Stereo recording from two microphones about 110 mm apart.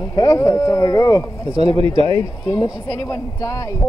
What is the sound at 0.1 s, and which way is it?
Speech, 35° left (ahead or behind).